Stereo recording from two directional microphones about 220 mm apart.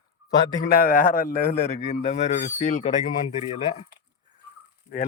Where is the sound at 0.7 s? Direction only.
40° left (ahead or behind).